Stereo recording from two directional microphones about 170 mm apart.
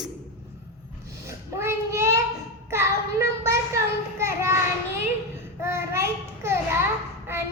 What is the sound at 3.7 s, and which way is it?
Children playing, 15° right (ahead or behind).